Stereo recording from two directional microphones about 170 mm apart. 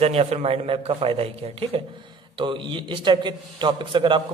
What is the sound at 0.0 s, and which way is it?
A man's voice, 35° right (ahead or behind).